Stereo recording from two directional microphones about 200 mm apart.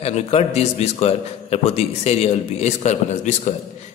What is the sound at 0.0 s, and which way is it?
A man's voice, 30° left (ahead or behind).